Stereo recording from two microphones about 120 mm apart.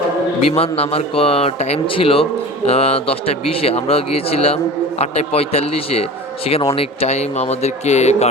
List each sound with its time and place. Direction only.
0.4 s a man's voice: 55° left (ahead or behind)